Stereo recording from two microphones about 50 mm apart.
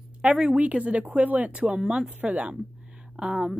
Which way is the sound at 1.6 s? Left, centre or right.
Centre.